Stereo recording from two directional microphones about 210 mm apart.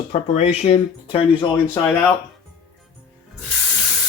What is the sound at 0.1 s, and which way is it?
Speech, 30° left (ahead or behind).